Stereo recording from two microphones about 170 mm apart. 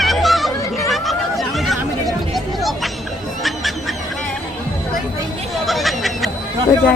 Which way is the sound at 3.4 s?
Centre (ahead or behind).